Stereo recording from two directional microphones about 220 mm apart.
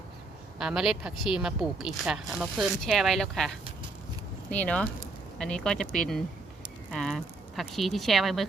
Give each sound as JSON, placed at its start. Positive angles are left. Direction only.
{"t": 0.6, "sound": "speech", "side_deg": 0}